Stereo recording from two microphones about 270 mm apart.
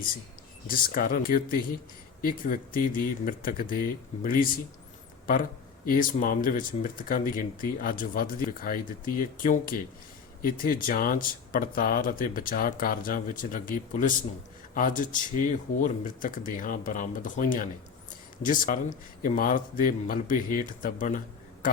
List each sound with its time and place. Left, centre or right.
0.7 s speech: left